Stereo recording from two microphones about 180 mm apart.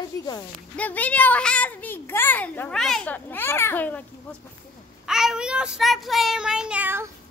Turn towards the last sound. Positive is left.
turn(degrees=-10)  # may be behind; listen again after turning